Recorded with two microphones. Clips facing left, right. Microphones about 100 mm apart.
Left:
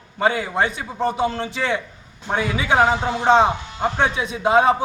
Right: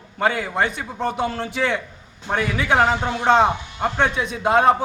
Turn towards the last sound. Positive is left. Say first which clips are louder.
# even
turn(degrees=0)  # may be behind; listen again after turning